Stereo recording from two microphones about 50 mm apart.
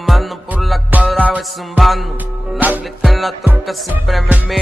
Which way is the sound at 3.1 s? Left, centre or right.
Centre.